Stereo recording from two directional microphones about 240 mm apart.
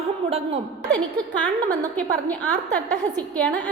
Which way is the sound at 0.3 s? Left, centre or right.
Right.